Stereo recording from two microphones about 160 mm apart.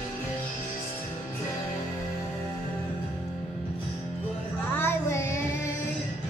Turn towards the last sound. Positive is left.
turn(degrees=15)  # may be behind; listen again after turning